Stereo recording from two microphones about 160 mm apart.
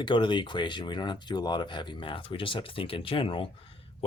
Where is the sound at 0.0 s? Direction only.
30° left (ahead or behind).